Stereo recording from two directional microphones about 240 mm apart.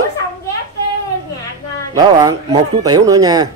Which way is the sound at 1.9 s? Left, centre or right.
Centre.